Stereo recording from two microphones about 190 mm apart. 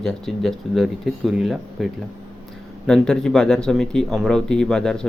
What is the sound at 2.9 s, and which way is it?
Speech, 5° left (ahead or behind).